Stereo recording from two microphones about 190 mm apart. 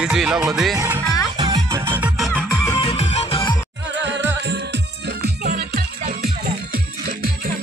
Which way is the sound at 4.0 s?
70° right (ahead or behind).